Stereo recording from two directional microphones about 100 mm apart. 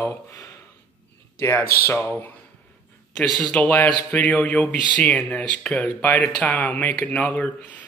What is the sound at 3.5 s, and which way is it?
A man's voice, 15° left (ahead or behind).